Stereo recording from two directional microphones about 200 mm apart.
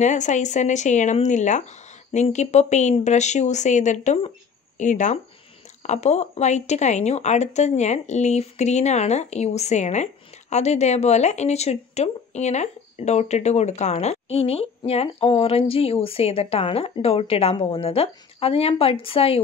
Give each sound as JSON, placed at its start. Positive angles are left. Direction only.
{"t": 0.0, "sound": "speech", "side_deg": 35}